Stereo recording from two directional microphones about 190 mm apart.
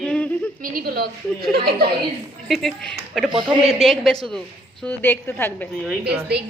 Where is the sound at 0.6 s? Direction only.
50° right (ahead or behind).